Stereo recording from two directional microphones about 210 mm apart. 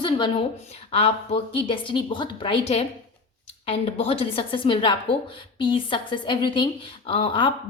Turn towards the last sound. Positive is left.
turn(degrees=25)  # may be behind; listen again after turning